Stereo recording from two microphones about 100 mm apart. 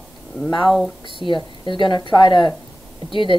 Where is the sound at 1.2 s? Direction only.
55° left (ahead or behind).